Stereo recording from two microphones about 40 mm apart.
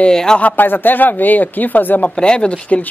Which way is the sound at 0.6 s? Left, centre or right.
Left.